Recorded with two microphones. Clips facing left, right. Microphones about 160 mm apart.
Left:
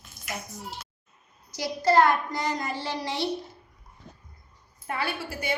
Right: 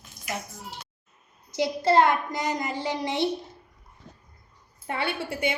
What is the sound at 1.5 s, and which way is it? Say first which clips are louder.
A woman's voice: right 1 dB; 25° right (ahead or behind).